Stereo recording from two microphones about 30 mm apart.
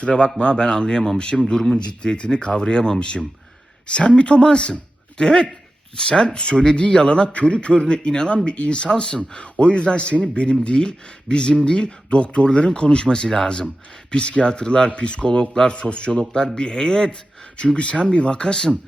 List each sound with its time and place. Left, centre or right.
0.0 s speech: left
2.0 s speech: left
5.2 s speech: left
14.1 s speech: left
17.7 s speech: left